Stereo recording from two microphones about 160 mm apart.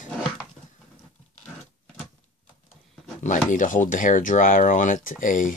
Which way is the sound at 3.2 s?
50° left (ahead or behind).